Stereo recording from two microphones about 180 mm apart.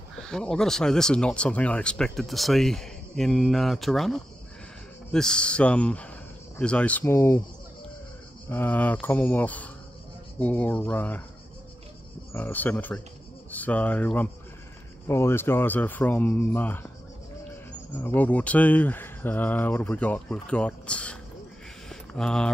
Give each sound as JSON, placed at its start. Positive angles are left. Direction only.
{"t": 0.1, "sound": "speech", "side_deg": 5}
{"t": 8.5, "sound": "speech", "side_deg": 10}
{"t": 12.3, "sound": "speech", "side_deg": 10}
{"t": 17.9, "sound": "speech", "side_deg": 10}
{"t": 21.8, "sound": "mantra", "side_deg": 5}